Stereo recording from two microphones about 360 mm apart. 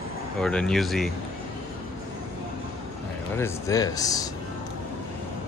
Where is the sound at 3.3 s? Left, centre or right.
Centre.